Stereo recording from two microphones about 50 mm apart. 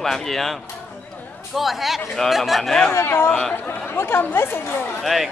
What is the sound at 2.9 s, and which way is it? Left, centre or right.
Speech, left.